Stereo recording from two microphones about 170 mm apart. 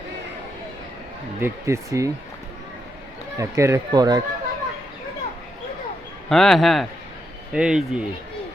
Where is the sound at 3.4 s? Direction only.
15° right (ahead or behind).